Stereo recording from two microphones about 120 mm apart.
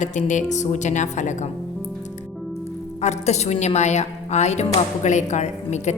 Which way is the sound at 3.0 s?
70° left (ahead or behind).